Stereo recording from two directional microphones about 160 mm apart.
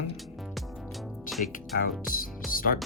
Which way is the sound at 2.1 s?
60° left (ahead or behind).